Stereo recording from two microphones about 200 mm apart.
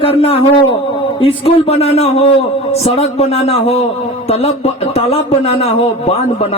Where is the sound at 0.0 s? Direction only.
30° left (ahead or behind).